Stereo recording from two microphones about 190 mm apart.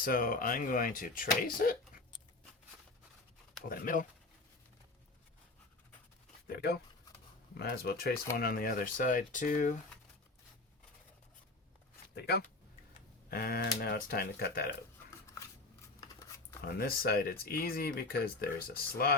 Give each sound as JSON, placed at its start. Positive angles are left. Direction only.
{"t": 0.0, "sound": "speech", "side_deg": 50}
{"t": 3.7, "sound": "speech", "side_deg": 45}
{"t": 6.5, "sound": "speech", "side_deg": 55}
{"t": 12.1, "sound": "speech", "side_deg": 55}
{"t": 16.0, "sound": "a sound", "side_deg": 15}
{"t": 16.7, "sound": "speech", "side_deg": 50}